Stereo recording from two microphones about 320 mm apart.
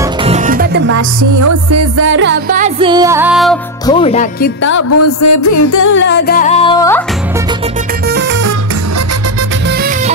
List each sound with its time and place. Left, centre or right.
0.0 s music: centre
0.9 s music: right; by 3.5 s centre
3.8 s music: centre
4.6 s music: left
5.9 s music: left; by 7.0 s centre
8.1 s music: right
9.7 s music: right